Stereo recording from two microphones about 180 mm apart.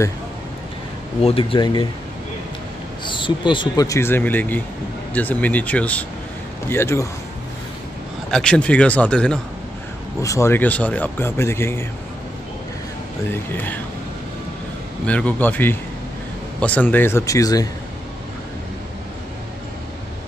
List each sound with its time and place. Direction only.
1.2 s speech: 30° left (ahead or behind)
3.1 s speech: 25° left (ahead or behind)
8.3 s speech: 5° left (ahead or behind)
10.2 s speech: 15° left (ahead or behind)
13.3 s speech: 10° left (ahead or behind)
15.0 s speech: 10° left (ahead or behind)